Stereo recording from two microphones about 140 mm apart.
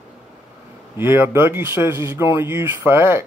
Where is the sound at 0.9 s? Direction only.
15° right (ahead or behind).